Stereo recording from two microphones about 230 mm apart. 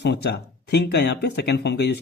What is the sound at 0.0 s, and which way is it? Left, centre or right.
Speech, left.